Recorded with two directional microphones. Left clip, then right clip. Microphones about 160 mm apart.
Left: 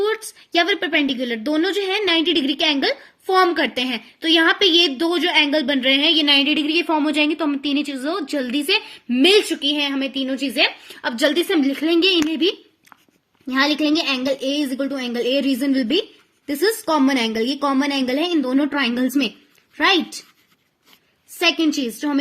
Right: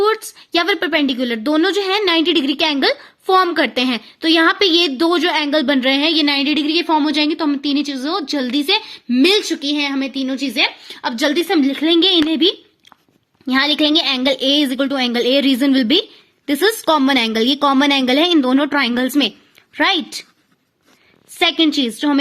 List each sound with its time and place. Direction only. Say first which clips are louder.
0.0 s a woman's voice: right 5 dB; 65° right (ahead or behind); by 12.2 s 50° right (ahead or behind)
13.5 s speech: right 4 dB; 65° right (ahead or behind)
21.4 s speech: right 4 dB; 55° right (ahead or behind)